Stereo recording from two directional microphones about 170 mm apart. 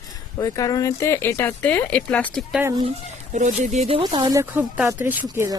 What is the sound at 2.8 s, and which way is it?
Speech, 40° right (ahead or behind).